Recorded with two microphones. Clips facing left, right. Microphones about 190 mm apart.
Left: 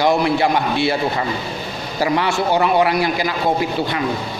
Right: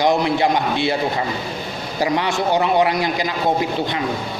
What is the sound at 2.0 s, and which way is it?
A man's voice, 20° right (ahead or behind).